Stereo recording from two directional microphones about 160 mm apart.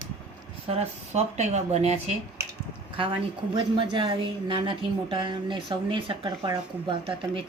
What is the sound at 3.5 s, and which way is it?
A woman's voice, 30° right (ahead or behind).